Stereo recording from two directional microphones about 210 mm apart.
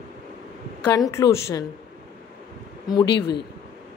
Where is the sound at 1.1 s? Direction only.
15° left (ahead or behind).